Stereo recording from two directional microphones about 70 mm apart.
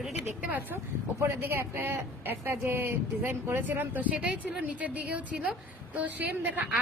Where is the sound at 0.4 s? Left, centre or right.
Right.